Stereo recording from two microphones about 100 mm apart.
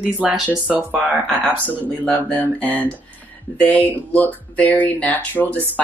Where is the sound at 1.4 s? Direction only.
15° left (ahead or behind).